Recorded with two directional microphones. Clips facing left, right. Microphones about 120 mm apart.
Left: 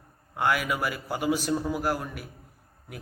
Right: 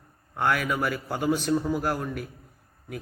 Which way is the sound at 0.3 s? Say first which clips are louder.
Right 1 dB; 5° left (ahead or behind).